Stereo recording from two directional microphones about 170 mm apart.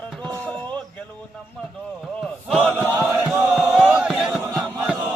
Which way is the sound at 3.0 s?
10° right (ahead or behind).